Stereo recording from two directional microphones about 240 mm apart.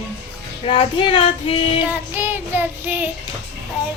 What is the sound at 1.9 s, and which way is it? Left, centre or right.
Child singing, centre.